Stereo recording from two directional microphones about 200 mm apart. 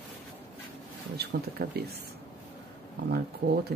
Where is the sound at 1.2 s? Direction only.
50° right (ahead or behind).